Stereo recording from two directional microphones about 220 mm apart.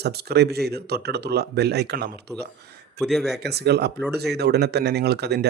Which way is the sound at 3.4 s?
50° right (ahead or behind).